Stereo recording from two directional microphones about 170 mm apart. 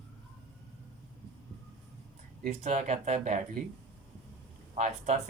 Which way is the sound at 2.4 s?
45° right (ahead or behind).